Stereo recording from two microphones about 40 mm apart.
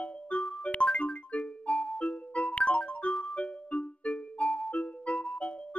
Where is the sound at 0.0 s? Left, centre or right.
Left.